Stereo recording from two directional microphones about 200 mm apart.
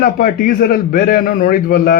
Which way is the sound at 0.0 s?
45° left (ahead or behind).